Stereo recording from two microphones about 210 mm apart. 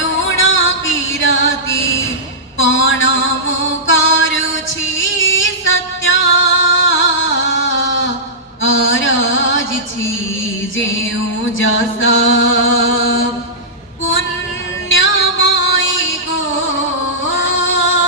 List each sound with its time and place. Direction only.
0.3 s music: 65° left (ahead or behind)
2.6 s a sound: 65° left (ahead or behind)
3.7 s music: 65° left (ahead or behind)
11.5 s chant: 65° left (ahead or behind)
14.8 s music: 65° left (ahead or behind)
17.2 s female singing: 65° left (ahead or behind)